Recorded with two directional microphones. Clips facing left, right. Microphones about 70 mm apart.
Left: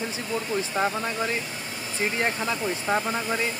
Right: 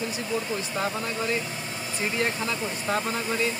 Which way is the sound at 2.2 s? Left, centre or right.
Left.